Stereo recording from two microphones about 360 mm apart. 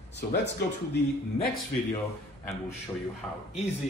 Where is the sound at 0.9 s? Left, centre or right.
Left.